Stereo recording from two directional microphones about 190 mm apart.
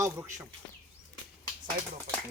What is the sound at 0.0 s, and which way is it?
Speech, 15° right (ahead or behind).